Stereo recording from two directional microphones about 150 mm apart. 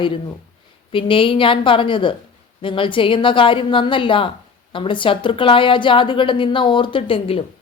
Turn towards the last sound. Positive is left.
turn(degrees=40)  # may be behind; listen again after turning